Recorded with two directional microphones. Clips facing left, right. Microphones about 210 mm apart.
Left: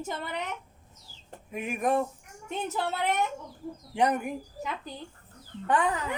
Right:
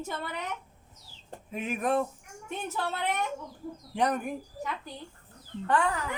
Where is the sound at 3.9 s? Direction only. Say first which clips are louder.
Left 2 dB; 15° left (ahead or behind).